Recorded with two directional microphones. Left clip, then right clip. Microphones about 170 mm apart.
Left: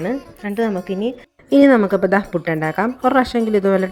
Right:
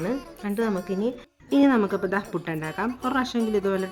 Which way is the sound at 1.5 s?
30° left (ahead or behind).